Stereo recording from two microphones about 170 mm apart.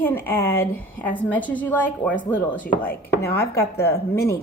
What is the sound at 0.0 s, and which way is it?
A woman's voice, 15° left (ahead or behind).